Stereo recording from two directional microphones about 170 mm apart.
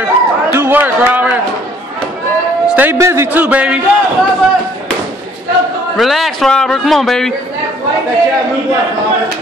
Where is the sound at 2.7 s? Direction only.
10° right (ahead or behind).